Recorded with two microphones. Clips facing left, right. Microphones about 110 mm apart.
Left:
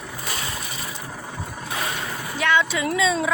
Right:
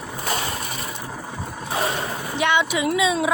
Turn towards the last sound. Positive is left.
turn(degrees=-10)  # may be behind; listen again after turning